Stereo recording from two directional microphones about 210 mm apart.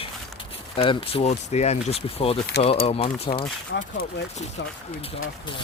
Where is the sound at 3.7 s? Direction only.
55° left (ahead or behind).